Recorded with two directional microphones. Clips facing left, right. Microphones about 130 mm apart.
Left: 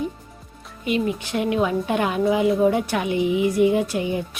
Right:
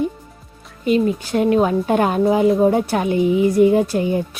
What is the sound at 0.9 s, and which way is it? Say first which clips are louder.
A woman's voice: right 6 dB; 35° right (ahead or behind).